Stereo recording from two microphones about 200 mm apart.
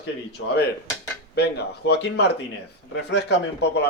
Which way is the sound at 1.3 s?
55° left (ahead or behind).